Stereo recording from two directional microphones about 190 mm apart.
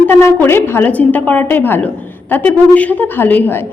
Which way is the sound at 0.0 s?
10° left (ahead or behind).